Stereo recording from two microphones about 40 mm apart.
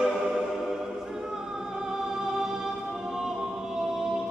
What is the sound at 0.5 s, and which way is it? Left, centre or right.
Music, centre.